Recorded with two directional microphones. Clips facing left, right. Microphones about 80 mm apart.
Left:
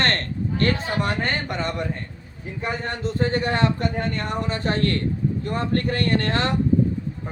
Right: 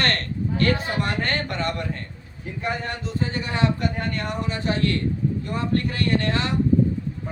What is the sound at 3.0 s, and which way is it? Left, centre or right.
Speech, left.